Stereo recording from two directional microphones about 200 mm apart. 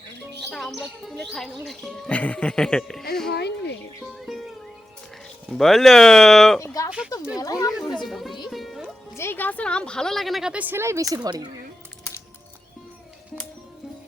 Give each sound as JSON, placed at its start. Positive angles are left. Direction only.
{"t": 0.5, "sound": "speech", "side_deg": 0}
{"t": 3.3, "sound": "speech", "side_deg": 55}
{"t": 4.0, "sound": "music", "side_deg": 0}
{"t": 5.5, "sound": "speech", "side_deg": 0}
{"t": 6.6, "sound": "speech", "side_deg": 15}
{"t": 7.9, "sound": "speech", "side_deg": 0}
{"t": 8.4, "sound": "music", "side_deg": 0}
{"t": 9.1, "sound": "speech", "side_deg": 10}